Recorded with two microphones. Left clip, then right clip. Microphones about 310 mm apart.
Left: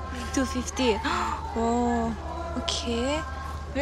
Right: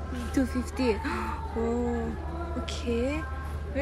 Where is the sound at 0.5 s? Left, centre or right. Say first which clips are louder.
Left 3 dB; left.